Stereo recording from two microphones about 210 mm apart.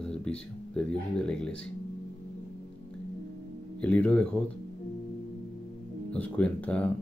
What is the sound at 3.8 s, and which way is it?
Speech, 5° left (ahead or behind).